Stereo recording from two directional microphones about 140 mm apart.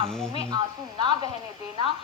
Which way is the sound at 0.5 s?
30° right (ahead or behind).